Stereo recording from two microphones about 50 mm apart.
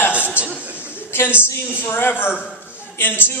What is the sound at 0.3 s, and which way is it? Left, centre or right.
Chuckle, right.